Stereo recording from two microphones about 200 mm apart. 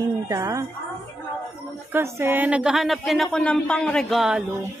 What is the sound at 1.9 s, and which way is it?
A woman's voice, 10° right (ahead or behind).